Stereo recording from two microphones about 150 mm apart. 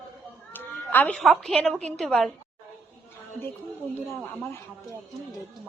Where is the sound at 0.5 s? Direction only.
15° left (ahead or behind).